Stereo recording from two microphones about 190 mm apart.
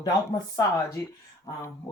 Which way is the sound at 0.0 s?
20° left (ahead or behind).